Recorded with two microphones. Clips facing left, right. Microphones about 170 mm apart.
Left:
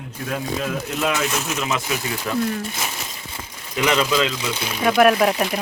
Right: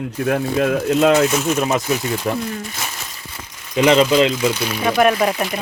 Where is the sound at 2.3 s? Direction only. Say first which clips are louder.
Right 1 dB; 30° right (ahead or behind).